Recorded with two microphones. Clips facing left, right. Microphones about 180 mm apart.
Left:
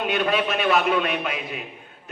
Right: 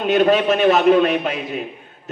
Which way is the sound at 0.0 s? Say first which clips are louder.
Right 8 dB; 45° right (ahead or behind).